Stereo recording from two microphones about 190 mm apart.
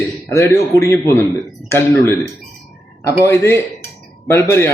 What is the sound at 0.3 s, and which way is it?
A man's voice, 15° left (ahead or behind).